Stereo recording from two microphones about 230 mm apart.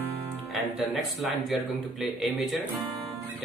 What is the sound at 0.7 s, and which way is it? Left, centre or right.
Speech, centre.